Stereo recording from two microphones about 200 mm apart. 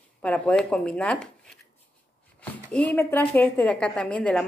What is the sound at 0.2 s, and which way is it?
A woman's voice, 5° left (ahead or behind).